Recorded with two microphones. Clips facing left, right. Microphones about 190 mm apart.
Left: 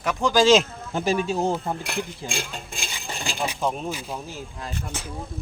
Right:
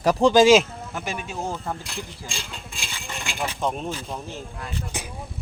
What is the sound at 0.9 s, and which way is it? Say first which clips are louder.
Speech: left 9 dB; 30° left (ahead or behind).